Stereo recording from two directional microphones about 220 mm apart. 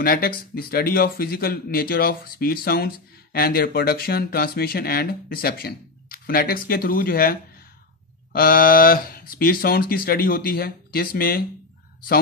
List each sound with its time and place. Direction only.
0.0 s speech: 45° left (ahead or behind)